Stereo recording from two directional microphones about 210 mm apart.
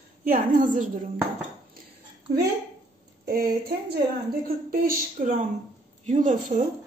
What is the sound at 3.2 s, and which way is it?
Speech, 45° right (ahead or behind).